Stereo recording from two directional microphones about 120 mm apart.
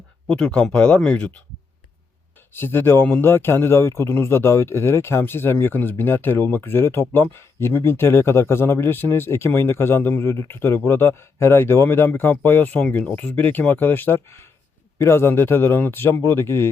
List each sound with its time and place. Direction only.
0.3 s speech: 10° left (ahead or behind)
2.5 s a man's voice: 20° left (ahead or behind)